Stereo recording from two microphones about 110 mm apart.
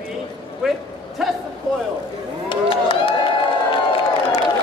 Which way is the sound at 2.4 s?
50° left (ahead or behind).